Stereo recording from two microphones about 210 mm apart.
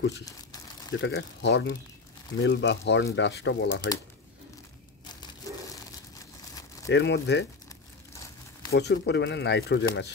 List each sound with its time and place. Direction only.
0.2 s crumpling: 20° left (ahead or behind)
1.0 s speech: 55° left (ahead or behind)
6.9 s speech: 55° left (ahead or behind)
8.7 s speech: 55° left (ahead or behind)